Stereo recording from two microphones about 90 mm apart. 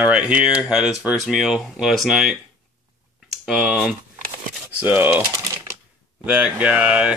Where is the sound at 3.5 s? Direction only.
5° right (ahead or behind).